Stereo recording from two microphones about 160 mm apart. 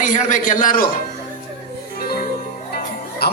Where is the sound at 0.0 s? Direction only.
50° left (ahead or behind).